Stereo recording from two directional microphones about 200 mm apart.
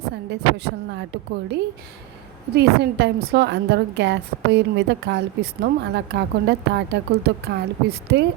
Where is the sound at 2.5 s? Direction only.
55° right (ahead or behind).